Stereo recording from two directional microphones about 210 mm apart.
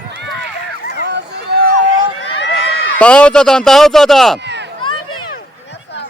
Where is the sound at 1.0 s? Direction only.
55° right (ahead or behind).